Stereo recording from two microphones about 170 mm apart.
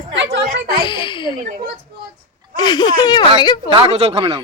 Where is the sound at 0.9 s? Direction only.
30° left (ahead or behind).